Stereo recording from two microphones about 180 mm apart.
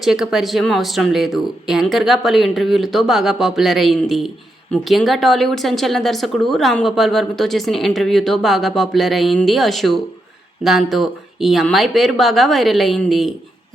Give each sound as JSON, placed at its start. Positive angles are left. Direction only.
{"t": 0.0, "sound": "speech", "side_deg": 0}